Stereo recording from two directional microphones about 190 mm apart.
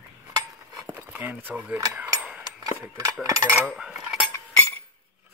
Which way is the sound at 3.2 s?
20° right (ahead or behind).